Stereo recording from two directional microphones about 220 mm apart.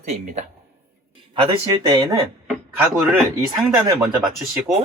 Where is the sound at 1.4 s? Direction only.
20° right (ahead or behind).